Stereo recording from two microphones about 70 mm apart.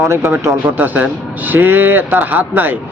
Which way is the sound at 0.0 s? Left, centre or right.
Right.